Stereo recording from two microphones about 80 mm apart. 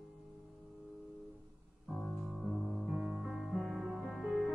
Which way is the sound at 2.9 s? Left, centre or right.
Centre.